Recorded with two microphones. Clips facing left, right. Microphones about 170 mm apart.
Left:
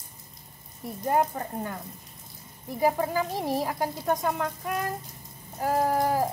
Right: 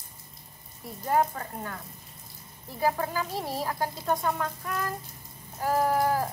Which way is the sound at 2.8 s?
20° left (ahead or behind).